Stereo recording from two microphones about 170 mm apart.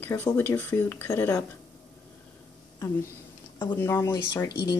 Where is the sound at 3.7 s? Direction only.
15° left (ahead or behind).